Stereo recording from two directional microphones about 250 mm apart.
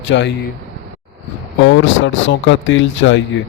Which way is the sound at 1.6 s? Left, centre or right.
Left.